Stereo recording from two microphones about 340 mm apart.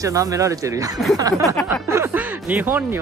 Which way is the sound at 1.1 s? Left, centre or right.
Centre.